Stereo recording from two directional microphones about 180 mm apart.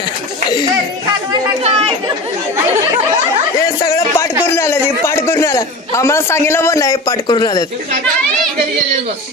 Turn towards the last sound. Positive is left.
turn(degrees=20)  # may be behind; listen again after turning